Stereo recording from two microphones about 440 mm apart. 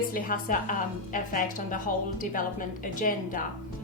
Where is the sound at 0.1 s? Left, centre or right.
Centre.